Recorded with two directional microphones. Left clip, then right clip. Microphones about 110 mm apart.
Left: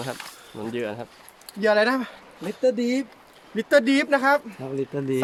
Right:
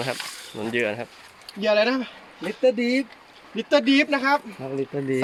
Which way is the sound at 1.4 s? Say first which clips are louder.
Left 1 dB; 60° left (ahead or behind).